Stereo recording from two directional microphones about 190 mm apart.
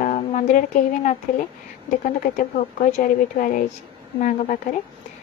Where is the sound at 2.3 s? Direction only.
45° left (ahead or behind).